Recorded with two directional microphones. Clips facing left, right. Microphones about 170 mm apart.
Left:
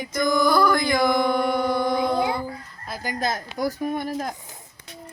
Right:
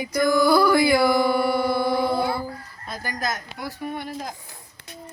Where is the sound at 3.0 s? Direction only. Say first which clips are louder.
Left 3 dB; 30° left (ahead or behind); by 4.3 s 45° left (ahead or behind).